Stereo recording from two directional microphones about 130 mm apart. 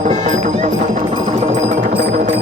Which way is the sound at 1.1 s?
55° right (ahead or behind).